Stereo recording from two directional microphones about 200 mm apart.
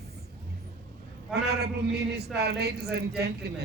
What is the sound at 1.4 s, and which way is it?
A man's voice, 55° right (ahead or behind).